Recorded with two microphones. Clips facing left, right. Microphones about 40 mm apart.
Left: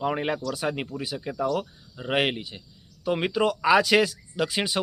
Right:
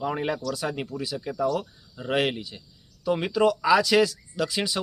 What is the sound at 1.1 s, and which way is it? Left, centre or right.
Speech, left.